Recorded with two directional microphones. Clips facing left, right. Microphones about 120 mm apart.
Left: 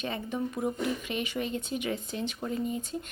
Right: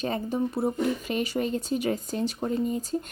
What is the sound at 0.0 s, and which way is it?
A woman's voice, 35° right (ahead or behind).